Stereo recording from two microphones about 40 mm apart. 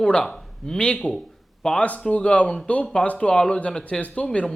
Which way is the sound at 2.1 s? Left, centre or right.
Left.